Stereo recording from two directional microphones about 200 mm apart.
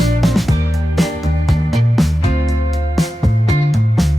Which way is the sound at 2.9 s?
Centre (ahead or behind).